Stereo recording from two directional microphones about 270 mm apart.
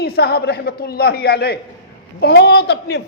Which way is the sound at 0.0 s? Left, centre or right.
Left.